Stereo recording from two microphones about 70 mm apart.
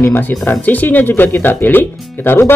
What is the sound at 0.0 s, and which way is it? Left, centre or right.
Speech, left.